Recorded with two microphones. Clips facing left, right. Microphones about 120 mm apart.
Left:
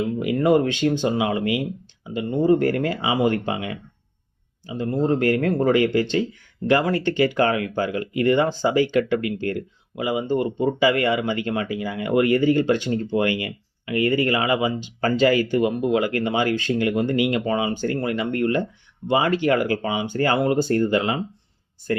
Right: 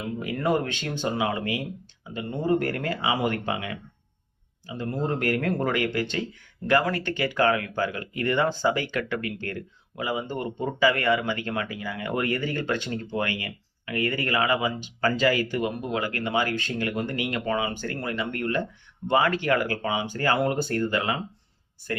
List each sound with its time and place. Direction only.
0.4 s speech: 20° left (ahead or behind)
2.1 s speech: 25° left (ahead or behind)